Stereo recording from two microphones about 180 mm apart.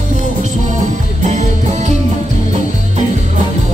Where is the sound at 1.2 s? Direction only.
40° right (ahead or behind).